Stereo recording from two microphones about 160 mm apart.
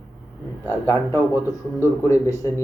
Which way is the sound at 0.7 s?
15° left (ahead or behind).